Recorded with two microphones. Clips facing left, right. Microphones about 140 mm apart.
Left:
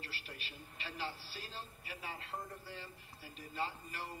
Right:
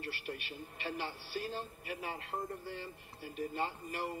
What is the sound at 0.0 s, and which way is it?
A man's voice, 55° right (ahead or behind).